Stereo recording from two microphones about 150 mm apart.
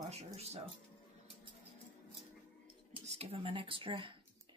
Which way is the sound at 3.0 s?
45° right (ahead or behind).